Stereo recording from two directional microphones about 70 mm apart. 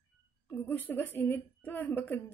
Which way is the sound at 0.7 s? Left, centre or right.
Left.